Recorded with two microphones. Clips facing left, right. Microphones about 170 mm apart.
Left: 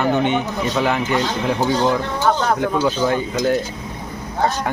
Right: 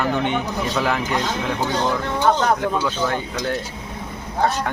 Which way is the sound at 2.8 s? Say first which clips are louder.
Left 5 dB; 15° left (ahead or behind).